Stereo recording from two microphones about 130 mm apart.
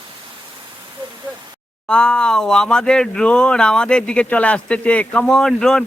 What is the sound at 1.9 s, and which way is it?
Speech, 5° left (ahead or behind).